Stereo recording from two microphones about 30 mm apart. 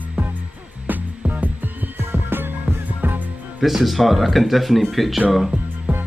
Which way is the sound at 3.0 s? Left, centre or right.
Right.